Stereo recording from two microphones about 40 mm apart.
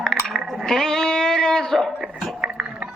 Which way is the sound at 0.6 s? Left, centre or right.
Centre.